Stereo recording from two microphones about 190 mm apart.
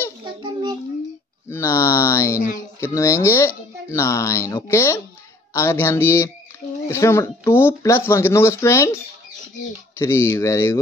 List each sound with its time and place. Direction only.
0.2 s child singing: 25° right (ahead or behind)
1.5 s speech: 15° left (ahead or behind)